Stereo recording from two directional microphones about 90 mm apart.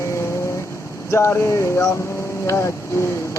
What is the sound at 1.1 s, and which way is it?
Mantra, 30° left (ahead or behind).